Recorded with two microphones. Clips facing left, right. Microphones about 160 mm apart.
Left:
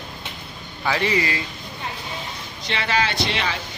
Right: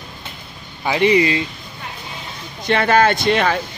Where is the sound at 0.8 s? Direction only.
20° right (ahead or behind).